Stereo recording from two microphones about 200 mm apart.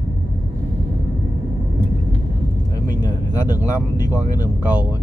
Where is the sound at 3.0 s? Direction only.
20° left (ahead or behind).